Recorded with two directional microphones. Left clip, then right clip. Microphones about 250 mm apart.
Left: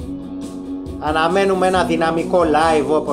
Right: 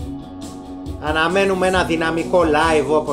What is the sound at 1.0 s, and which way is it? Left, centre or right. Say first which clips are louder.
A man's voice: left 1 dB; centre.